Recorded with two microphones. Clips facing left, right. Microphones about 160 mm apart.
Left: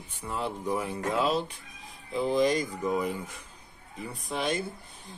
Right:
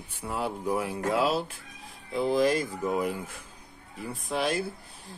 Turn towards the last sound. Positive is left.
turn(degrees=0)  # may be behind; listen again after turning